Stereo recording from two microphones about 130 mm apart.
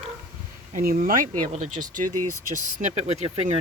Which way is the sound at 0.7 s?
90° right.